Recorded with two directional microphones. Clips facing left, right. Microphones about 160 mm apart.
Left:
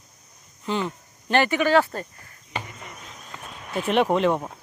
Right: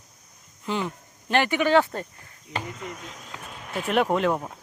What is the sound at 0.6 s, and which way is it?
Speech, 10° right (ahead or behind).